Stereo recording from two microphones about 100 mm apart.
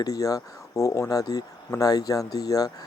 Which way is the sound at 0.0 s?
35° left (ahead or behind).